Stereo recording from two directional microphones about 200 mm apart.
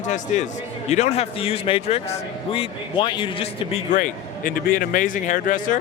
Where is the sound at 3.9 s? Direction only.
40° left (ahead or behind).